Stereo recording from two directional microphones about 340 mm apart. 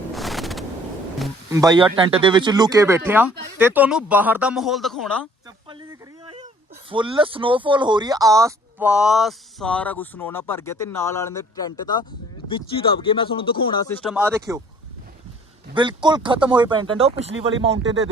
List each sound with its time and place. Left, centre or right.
0.1 s a sound: centre
1.2 s speech: centre
5.6 s speech: centre
15.7 s speech: centre